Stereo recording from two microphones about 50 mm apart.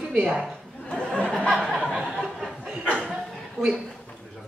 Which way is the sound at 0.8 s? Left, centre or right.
Centre.